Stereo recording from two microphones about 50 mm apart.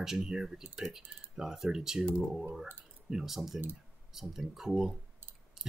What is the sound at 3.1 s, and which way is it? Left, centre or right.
Speech, centre.